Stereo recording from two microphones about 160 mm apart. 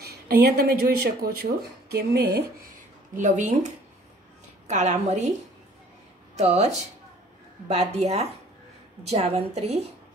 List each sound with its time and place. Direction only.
0.0 s speech: 80° right
3.2 s a woman's voice: 50° right (ahead or behind)
6.3 s a woman's voice: 45° right (ahead or behind)